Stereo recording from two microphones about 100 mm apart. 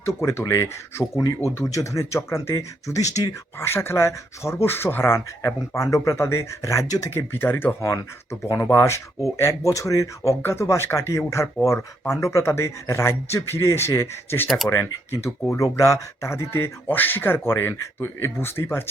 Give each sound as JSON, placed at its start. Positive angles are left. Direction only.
{"t": 0.2, "sound": "speech", "side_deg": 25}
{"t": 7.1, "sound": "speech", "side_deg": 25}